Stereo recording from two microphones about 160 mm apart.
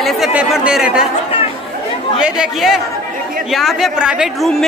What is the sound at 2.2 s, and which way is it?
A woman's voice, 5° right (ahead or behind).